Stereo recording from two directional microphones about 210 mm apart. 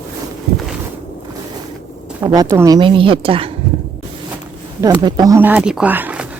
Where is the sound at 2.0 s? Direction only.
15° right (ahead or behind).